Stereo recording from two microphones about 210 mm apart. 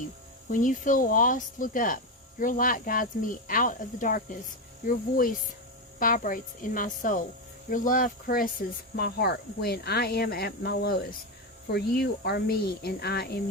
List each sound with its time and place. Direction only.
0.5 s speech: 40° left (ahead or behind)